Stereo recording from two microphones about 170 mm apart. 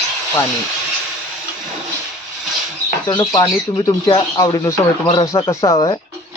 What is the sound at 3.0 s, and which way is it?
Speech, 25° left (ahead or behind).